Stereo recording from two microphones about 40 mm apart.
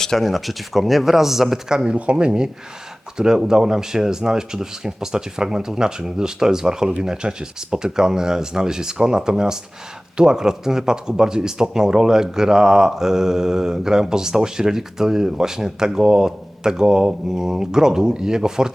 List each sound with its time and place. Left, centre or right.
0.2 s speech: centre
1.7 s speech: centre